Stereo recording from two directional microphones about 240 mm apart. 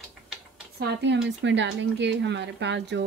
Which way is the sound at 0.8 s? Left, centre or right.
Right.